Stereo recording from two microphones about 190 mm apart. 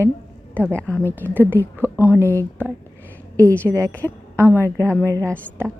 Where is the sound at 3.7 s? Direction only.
15° right (ahead or behind).